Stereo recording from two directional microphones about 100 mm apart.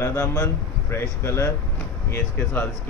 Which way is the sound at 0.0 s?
30° left (ahead or behind).